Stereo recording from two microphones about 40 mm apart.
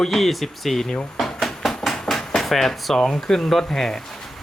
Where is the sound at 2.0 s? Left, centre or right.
Centre.